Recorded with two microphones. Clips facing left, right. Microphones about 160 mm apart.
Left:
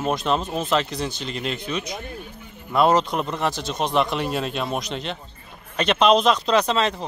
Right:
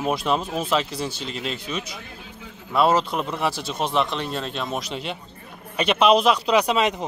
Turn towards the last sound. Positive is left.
turn(degrees=-15)  # may be behind; listen again after turning